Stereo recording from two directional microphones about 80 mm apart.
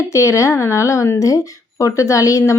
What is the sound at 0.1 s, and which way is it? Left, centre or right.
Speech, left.